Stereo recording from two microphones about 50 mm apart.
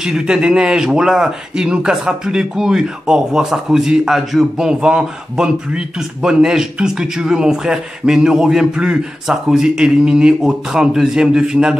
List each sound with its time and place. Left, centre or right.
0.0 s a man's voice: centre